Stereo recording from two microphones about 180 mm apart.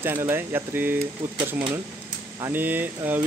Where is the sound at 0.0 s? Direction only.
15° right (ahead or behind).